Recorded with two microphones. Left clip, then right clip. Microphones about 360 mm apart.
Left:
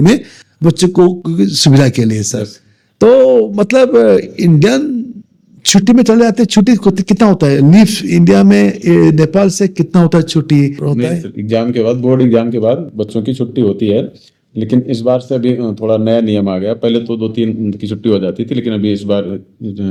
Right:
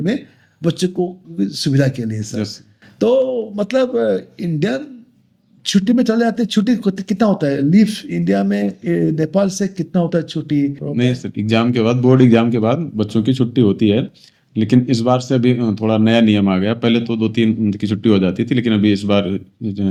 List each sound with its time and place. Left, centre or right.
0.6 s speech: left
1.4 s speech: left
10.9 s speech: centre
11.3 s speech: centre